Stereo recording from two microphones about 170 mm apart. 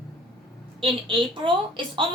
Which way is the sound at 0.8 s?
30° right (ahead or behind).